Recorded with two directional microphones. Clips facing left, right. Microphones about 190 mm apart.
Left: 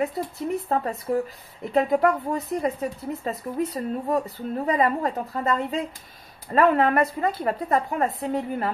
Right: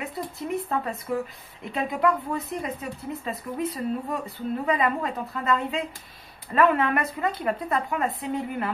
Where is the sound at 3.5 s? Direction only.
35° left (ahead or behind).